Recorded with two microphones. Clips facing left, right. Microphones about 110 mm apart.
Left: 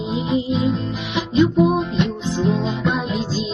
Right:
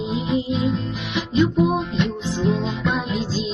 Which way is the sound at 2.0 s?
20° left (ahead or behind).